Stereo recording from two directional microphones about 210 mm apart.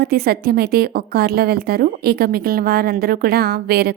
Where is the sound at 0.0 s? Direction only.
45° right (ahead or behind).